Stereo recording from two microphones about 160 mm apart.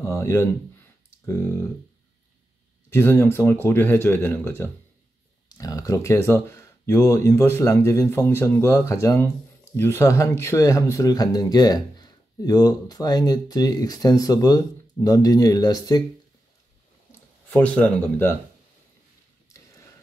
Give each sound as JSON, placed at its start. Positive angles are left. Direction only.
{"t": 0.0, "sound": "speech", "side_deg": 20}
{"t": 2.9, "sound": "speech", "side_deg": 15}
{"t": 17.5, "sound": "speech", "side_deg": 10}
{"t": 19.5, "sound": "a sound", "side_deg": 20}